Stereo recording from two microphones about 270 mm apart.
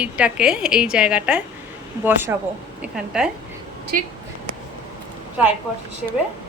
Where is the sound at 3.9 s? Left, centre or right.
Right.